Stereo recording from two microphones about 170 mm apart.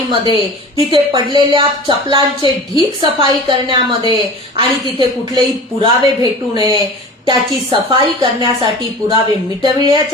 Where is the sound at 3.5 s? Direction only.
30° right (ahead or behind).